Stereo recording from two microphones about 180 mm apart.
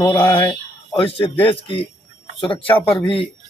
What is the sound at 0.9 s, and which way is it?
Speech, 30° left (ahead or behind).